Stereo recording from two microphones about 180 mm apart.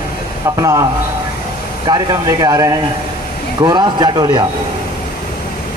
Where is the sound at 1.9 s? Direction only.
20° right (ahead or behind).